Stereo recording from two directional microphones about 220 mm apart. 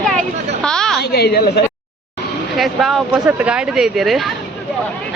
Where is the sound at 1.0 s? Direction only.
45° left (ahead or behind).